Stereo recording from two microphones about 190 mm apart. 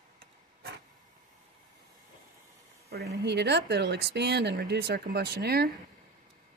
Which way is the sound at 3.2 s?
60° right (ahead or behind).